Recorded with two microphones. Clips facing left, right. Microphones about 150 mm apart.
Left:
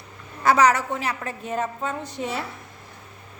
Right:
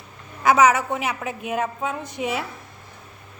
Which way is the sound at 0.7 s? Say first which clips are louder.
Right 1 dB; 15° right (ahead or behind).